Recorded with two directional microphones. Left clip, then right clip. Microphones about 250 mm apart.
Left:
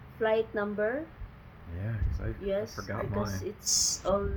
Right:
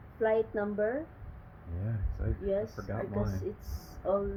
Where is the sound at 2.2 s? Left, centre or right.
Centre.